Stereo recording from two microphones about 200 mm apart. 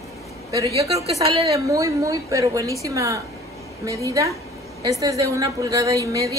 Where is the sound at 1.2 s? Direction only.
30° right (ahead or behind).